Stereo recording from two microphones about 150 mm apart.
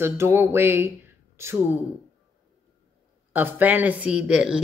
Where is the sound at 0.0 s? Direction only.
15° right (ahead or behind).